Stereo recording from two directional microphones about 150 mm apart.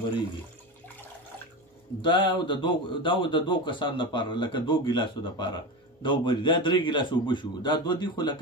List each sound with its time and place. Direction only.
2.0 s a man's voice: 30° left (ahead or behind)